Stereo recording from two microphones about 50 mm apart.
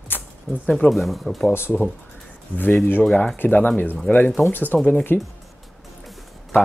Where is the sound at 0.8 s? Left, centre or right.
Centre.